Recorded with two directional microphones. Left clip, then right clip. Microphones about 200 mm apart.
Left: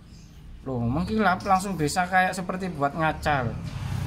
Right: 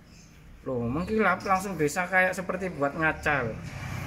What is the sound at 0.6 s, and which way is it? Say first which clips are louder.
Speech: left 1 dB; 5° left (ahead or behind).